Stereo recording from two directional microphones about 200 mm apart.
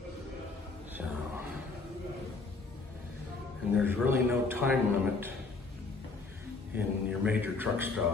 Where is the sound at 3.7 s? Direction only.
10° right (ahead or behind).